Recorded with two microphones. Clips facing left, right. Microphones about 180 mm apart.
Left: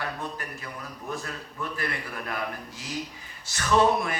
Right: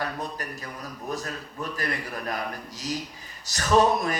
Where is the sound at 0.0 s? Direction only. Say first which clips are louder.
Right 2 dB; 40° right (ahead or behind).